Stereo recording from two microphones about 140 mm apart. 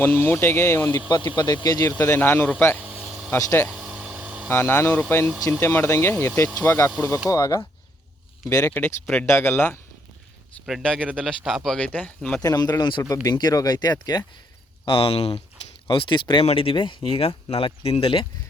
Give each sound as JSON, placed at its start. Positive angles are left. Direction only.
{"t": 0.0, "sound": "speech", "side_deg": 15}
{"t": 1.0, "sound": "speech", "side_deg": 30}
{"t": 1.9, "sound": "speech", "side_deg": 15}
{"t": 2.8, "sound": "vehicle", "side_deg": -10}
{"t": 3.3, "sound": "speech", "side_deg": 20}
{"t": 3.7, "sound": "a sound", "side_deg": -5}
{"t": 4.4, "sound": "speech", "side_deg": 15}
{"t": 10.7, "sound": "speech", "side_deg": 0}
{"t": 12.4, "sound": "speech", "side_deg": 30}
{"t": 14.8, "sound": "speech", "side_deg": 40}